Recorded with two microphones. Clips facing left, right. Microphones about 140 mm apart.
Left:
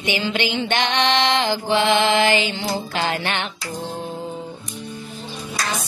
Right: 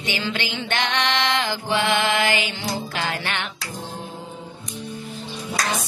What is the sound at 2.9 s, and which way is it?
Music, 25° left (ahead or behind).